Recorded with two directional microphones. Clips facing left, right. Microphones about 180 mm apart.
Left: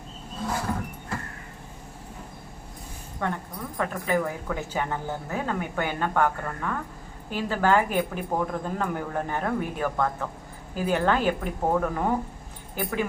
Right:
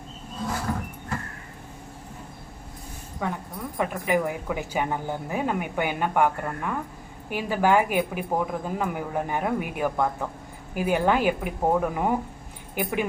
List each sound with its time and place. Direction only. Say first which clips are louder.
3.2 s a woman's voice: even; 5° right (ahead or behind)